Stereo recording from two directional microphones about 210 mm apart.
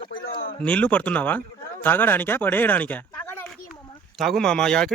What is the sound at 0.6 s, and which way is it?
Speech, 5° left (ahead or behind).